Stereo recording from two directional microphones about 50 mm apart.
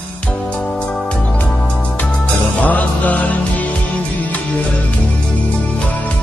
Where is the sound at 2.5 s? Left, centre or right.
Left.